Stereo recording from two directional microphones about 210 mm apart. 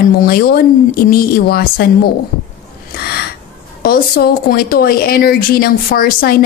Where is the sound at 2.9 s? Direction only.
50° left (ahead or behind).